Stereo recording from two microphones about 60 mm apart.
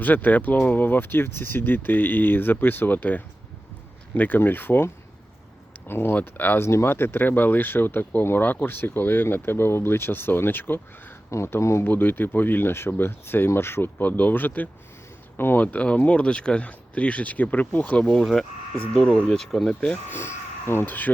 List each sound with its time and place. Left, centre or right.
0.0 s speech: left
5.9 s speech: left
6.6 s speech: left
11.4 s speech: left
11.9 s speech: left
15.6 s speech: left
18.0 s speech: centre
20.1 s speech: left